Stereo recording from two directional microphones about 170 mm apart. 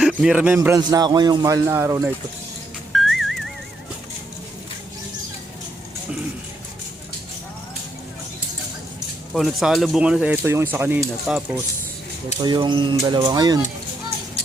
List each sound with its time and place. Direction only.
0.2 s a man's voice: 5° right (ahead or behind)
0.8 s a man's voice: 25° right (ahead or behind)
2.9 s music: centre (ahead or behind)
9.3 s speech: centre (ahead or behind)
12.4 s a man's voice: 25° right (ahead or behind)